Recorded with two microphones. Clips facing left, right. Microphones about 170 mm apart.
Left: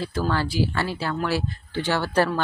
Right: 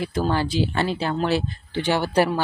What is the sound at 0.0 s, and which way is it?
Speech, 20° right (ahead or behind).